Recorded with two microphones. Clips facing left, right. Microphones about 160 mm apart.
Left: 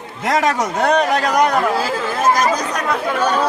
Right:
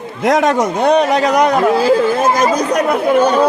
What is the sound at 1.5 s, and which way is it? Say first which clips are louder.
Speech: right 7 dB; 20° right (ahead or behind).